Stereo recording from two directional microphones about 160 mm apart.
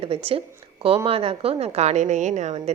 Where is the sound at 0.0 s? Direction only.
35° right (ahead or behind).